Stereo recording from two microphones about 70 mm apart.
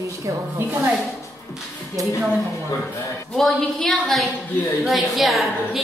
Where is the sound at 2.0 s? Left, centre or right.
Right.